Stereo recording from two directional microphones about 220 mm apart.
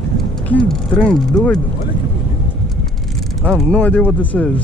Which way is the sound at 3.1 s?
Centre (ahead or behind).